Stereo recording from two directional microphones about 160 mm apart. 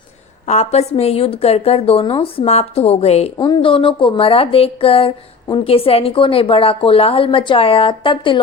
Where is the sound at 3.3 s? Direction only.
30° left (ahead or behind).